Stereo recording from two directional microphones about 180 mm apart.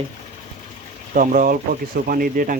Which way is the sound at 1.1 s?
45° right (ahead or behind).